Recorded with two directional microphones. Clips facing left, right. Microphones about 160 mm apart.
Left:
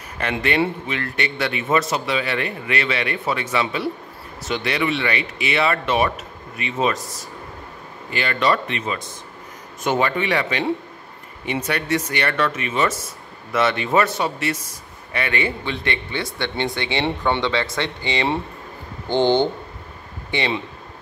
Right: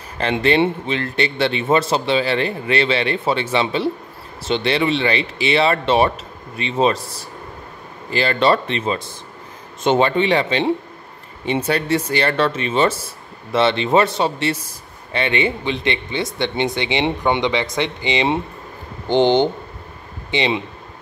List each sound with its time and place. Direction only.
0.2 s a man's voice: 30° right (ahead or behind)